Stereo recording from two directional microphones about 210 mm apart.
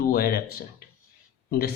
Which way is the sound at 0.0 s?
45° left (ahead or behind).